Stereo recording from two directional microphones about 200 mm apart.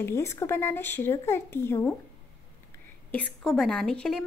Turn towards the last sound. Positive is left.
turn(degrees=5)  # may be behind; listen again after turning